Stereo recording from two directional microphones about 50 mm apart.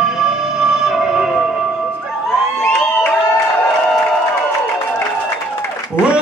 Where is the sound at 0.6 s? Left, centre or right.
Centre.